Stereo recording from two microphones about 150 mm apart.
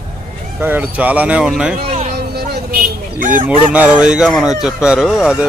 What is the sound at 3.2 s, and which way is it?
Speech, 65° right (ahead or behind).